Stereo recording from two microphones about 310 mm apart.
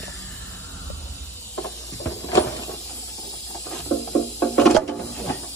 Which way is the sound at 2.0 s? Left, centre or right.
Left.